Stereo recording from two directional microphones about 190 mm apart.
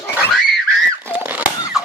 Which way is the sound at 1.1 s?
10° right (ahead or behind).